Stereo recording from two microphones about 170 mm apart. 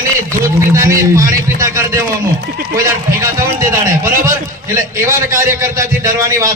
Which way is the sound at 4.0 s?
55° right (ahead or behind).